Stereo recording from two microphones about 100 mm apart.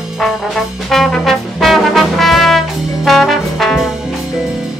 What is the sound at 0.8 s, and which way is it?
Music, centre (ahead or behind).